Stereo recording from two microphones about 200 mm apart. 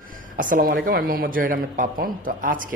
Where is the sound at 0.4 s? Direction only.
45° right (ahead or behind).